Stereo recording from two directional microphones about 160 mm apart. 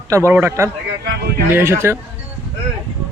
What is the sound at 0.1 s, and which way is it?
A man's voice, 15° right (ahead or behind).